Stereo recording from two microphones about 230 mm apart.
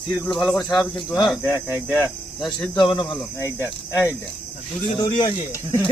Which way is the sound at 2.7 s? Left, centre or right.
Left.